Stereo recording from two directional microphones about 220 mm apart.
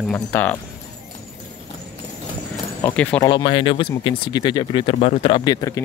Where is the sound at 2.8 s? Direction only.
5° left (ahead or behind).